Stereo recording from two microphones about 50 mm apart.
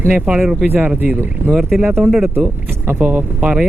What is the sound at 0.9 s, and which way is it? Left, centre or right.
Speech, right.